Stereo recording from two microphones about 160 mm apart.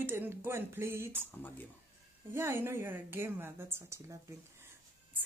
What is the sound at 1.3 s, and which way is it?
Speech, 10° left (ahead or behind).